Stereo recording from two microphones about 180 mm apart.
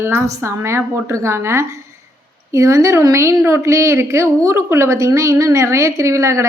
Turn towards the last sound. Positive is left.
turn(degrees=-15)  # may be behind; listen again after turning